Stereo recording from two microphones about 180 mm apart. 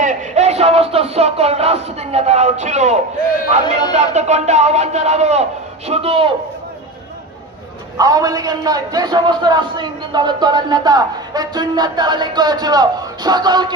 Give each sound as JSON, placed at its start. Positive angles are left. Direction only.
{"t": 0.0, "sound": "music", "side_deg": -40}
{"t": 3.9, "sound": "a man's voice", "side_deg": -40}
{"t": 8.0, "sound": "a man's voice", "side_deg": -20}